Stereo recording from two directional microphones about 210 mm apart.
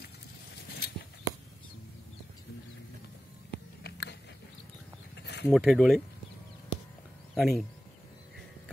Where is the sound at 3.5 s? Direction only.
50° left (ahead or behind).